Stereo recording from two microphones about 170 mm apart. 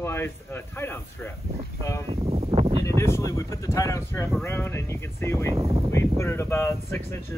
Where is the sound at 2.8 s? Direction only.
15° left (ahead or behind).